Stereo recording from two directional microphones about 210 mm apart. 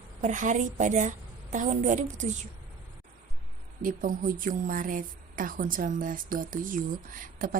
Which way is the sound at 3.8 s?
40° right (ahead or behind).